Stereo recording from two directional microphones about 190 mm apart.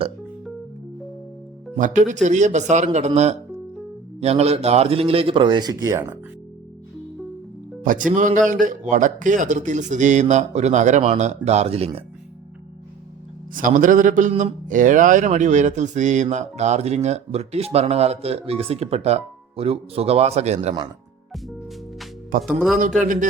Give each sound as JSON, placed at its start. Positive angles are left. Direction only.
{"t": 1.7, "sound": "a man's voice", "side_deg": -40}
{"t": 4.2, "sound": "speech", "side_deg": -35}
{"t": 7.9, "sound": "a man's voice", "side_deg": -45}
{"t": 13.5, "sound": "a man's voice", "side_deg": -45}
{"t": 22.4, "sound": "speech", "side_deg": 0}